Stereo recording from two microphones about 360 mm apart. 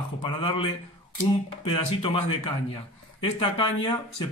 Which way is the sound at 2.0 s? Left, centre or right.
Centre.